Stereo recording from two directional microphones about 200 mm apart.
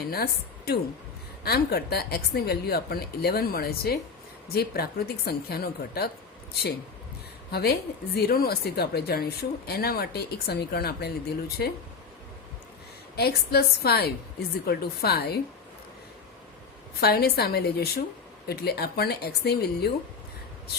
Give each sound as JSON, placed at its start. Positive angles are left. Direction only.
{"t": 0.1, "sound": "speech", "side_deg": 50}
{"t": 13.1, "sound": "speech", "side_deg": 50}
{"t": 17.0, "sound": "speech", "side_deg": 50}